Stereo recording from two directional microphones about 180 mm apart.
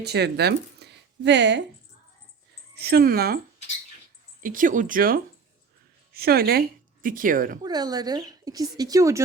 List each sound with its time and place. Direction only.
0.0 s speech: 65° right (ahead or behind)
2.7 s a woman's voice: 60° right (ahead or behind)
7.6 s speech: 20° right (ahead or behind)